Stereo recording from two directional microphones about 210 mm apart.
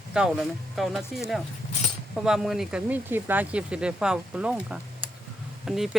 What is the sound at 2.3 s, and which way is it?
Speech, centre (ahead or behind).